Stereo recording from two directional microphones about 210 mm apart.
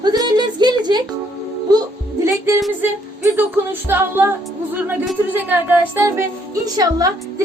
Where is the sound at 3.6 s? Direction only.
10° right (ahead or behind).